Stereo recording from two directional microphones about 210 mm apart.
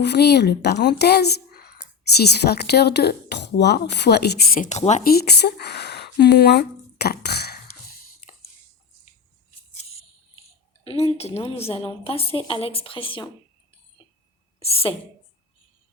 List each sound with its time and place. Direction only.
0.0 s a woman's voice: 50° left (ahead or behind); by 5.1 s 35° left (ahead or behind)
5.1 s a sound: 50° left (ahead or behind)
10.8 s a woman's voice: 30° left (ahead or behind)
14.6 s a woman's voice: 25° left (ahead or behind)